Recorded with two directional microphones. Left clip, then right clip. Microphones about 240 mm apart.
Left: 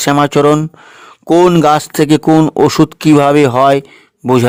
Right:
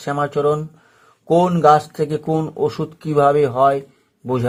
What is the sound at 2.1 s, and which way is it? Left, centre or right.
Speech, left.